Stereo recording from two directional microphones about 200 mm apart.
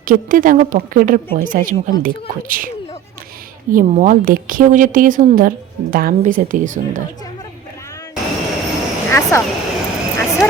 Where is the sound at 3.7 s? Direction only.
40° right (ahead or behind).